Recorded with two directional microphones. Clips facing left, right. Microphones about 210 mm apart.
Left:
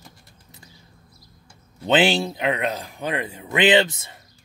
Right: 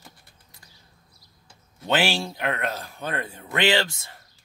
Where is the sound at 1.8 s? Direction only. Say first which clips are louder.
Left 5 dB; 20° left (ahead or behind).